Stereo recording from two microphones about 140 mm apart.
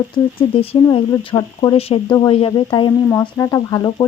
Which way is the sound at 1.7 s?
45° left (ahead or behind).